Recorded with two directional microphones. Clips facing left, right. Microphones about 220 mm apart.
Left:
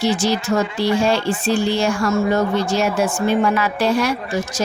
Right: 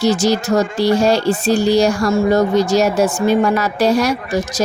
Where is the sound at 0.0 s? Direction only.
40° right (ahead or behind).